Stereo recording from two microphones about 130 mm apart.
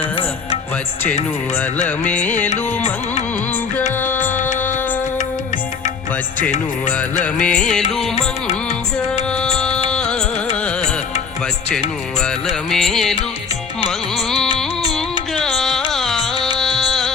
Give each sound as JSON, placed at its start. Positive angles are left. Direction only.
{"t": 2.0, "sound": "music", "side_deg": 10}
{"t": 2.5, "sound": "carnatic music", "side_deg": 60}
{"t": 4.0, "sound": "music", "side_deg": 15}
{"t": 4.4, "sound": "music", "side_deg": 75}
{"t": 7.3, "sound": "music", "side_deg": 10}
{"t": 9.3, "sound": "music", "side_deg": 5}
{"t": 12.2, "sound": "music", "side_deg": 5}
{"t": 15.4, "sound": "carnatic music", "side_deg": 5}
{"t": 15.9, "sound": "music", "side_deg": 0}